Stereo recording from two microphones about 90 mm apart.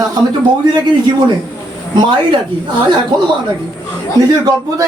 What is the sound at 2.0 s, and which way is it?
Speech, 65° right (ahead or behind).